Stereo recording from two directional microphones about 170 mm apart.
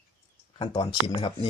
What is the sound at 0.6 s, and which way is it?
Speech, 30° left (ahead or behind).